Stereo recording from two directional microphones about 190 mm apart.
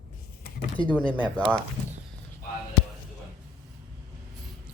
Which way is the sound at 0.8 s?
25° left (ahead or behind).